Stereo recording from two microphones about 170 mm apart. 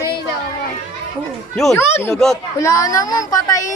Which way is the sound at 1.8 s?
15° left (ahead or behind).